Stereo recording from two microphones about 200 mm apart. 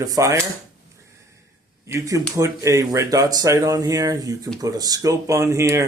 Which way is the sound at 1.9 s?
15° right (ahead or behind).